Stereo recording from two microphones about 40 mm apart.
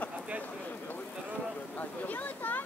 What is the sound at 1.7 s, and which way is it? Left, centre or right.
Speech, left.